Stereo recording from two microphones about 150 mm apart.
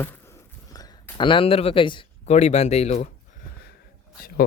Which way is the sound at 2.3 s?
50° left (ahead or behind).